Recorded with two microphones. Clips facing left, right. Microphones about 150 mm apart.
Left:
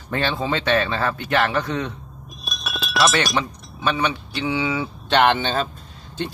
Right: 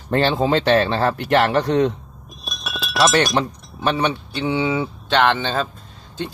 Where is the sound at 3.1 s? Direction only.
35° right (ahead or behind).